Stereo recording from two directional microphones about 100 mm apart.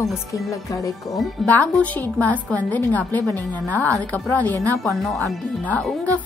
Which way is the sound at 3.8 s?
30° right (ahead or behind).